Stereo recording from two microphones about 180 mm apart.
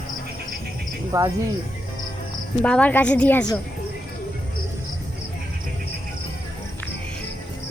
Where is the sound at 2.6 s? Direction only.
5° left (ahead or behind).